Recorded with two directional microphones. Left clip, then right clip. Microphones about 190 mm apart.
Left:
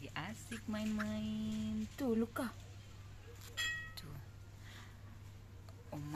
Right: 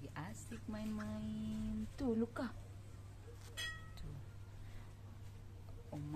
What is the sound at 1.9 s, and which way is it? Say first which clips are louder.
Speech: left 2 dB; 40° left (ahead or behind).